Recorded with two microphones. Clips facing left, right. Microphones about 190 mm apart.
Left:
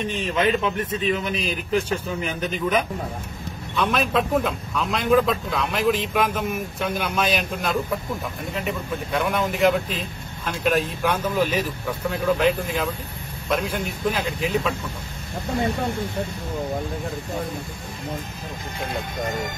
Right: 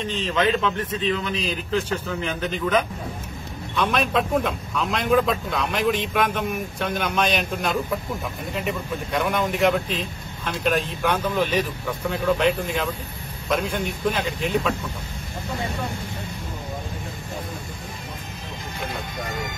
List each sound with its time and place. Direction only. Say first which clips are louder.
0.1 s a man's voice: right 1 dB; 10° left (ahead or behind)